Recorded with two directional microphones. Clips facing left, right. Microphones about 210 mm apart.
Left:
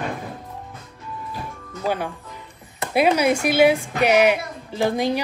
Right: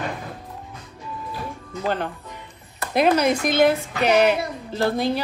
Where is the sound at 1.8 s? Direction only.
10° left (ahead or behind).